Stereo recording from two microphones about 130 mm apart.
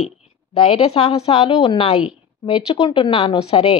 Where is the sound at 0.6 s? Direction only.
45° left (ahead or behind).